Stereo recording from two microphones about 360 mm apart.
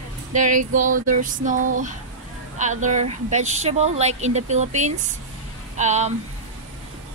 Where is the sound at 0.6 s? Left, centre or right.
Right.